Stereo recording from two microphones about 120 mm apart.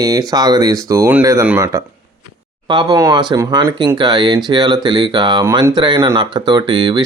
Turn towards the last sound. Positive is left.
turn(degrees=-40)  # may be behind; listen again after turning